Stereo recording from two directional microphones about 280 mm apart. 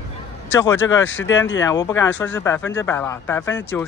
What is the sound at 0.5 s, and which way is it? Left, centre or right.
Speech, centre.